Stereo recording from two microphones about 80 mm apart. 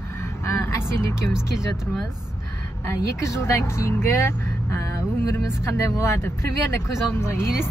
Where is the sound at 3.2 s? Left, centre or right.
Left.